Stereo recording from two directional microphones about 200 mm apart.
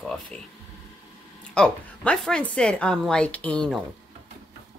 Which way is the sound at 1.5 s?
5° left (ahead or behind).